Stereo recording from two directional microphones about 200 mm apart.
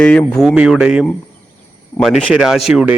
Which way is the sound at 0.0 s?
5° left (ahead or behind).